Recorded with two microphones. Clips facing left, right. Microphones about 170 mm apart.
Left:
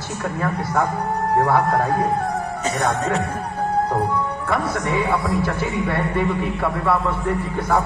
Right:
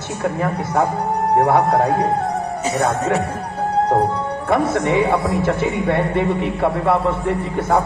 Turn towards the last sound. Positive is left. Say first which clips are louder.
# right 3 dB
turn(degrees=-25)  # may be behind; listen again after turning